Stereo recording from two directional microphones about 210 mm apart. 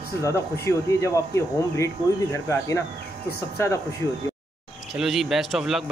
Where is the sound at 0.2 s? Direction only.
15° left (ahead or behind).